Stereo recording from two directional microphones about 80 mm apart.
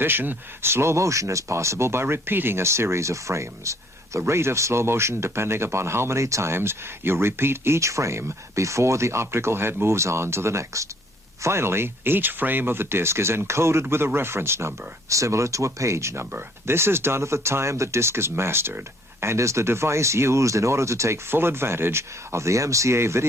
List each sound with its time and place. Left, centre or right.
0.0 s speech: right